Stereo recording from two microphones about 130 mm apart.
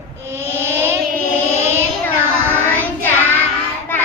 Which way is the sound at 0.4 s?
20° right (ahead or behind).